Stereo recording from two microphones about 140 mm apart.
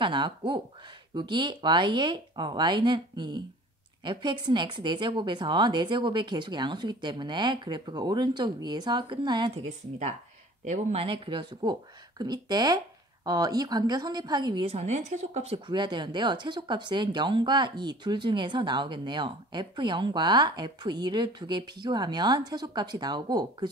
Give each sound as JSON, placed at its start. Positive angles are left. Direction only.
{"t": 0.0, "sound": "speech", "side_deg": -35}
{"t": 9.7, "sound": "speech", "side_deg": -60}
{"t": 10.7, "sound": "speech", "side_deg": -45}
{"t": 14.7, "sound": "speech", "side_deg": -50}